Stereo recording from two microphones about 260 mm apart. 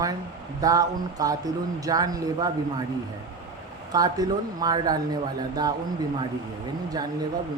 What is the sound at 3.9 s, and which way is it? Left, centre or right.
Speech, centre.